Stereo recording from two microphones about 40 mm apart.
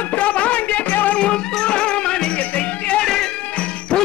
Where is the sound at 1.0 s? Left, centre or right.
Left.